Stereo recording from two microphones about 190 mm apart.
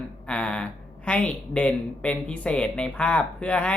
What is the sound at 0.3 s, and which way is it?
Speech, 5° left (ahead or behind).